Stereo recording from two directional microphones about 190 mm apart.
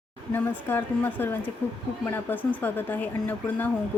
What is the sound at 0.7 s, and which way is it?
Speech, 10° left (ahead or behind).